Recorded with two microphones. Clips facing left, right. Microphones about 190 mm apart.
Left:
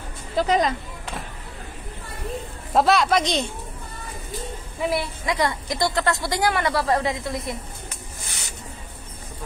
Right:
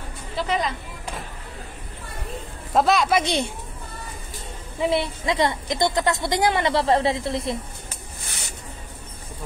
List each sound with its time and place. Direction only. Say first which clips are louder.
0.4 s speech: left 5 dB; 40° left (ahead or behind)
2.7 s speech: left 1 dB; centre (ahead or behind)
4.8 s a woman's voice: right 2 dB; 25° right (ahead or behind)
8.3 s a sound: right 3 dB; 55° right (ahead or behind)